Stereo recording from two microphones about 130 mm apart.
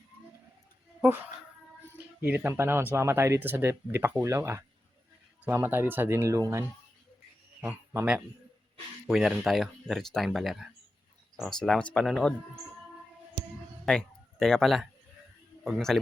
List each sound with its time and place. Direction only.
2.2 s speech: 15° right (ahead or behind)
7.6 s speech: 10° right (ahead or behind)
13.8 s speech: 5° left (ahead or behind)